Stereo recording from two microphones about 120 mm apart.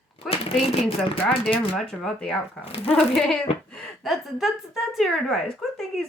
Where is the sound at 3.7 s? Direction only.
5° left (ahead or behind).